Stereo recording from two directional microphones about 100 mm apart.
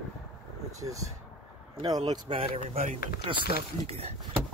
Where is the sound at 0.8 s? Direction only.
35° right (ahead or behind).